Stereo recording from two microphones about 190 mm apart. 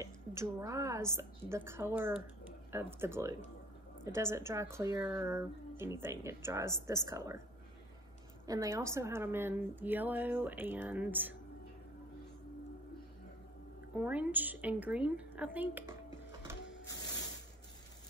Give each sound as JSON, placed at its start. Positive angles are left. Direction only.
{"t": 0.0, "sound": "speech", "side_deg": -15}
{"t": 8.5, "sound": "speech", "side_deg": -15}
{"t": 13.9, "sound": "speech", "side_deg": -5}